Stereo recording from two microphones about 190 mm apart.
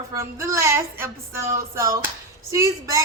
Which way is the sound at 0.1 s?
15° right (ahead or behind).